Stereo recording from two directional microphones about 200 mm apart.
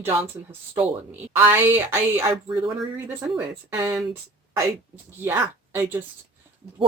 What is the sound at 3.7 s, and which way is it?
Speech, 15° right (ahead or behind).